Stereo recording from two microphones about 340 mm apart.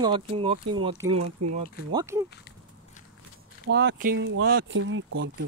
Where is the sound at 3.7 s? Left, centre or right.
Right.